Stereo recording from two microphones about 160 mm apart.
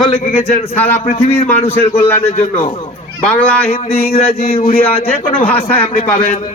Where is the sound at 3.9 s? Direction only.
65° left (ahead or behind).